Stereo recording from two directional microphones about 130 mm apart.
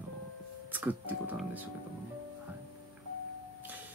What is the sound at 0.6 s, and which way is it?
Speech, 15° right (ahead or behind).